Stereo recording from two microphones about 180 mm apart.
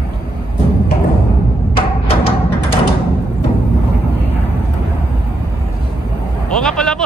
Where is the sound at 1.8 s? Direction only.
30° left (ahead or behind).